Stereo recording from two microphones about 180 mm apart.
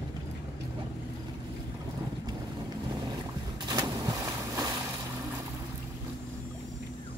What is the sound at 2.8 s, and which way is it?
Boat, 25° right (ahead or behind).